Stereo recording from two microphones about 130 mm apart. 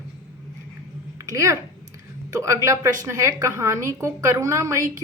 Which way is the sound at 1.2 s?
25° right (ahead or behind).